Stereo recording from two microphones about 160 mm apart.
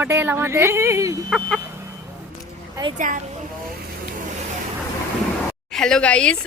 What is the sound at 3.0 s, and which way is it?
Speech, 55° right (ahead or behind).